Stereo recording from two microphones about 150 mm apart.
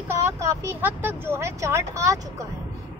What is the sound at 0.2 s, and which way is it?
Speech, 20° right (ahead or behind).